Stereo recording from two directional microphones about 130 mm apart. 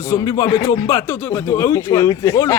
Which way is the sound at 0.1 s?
25° left (ahead or behind).